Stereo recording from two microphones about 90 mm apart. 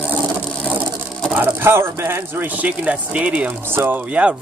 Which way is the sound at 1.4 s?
25° right (ahead or behind).